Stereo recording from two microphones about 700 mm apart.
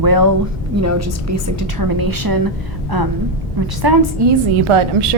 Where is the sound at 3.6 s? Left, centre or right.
Right.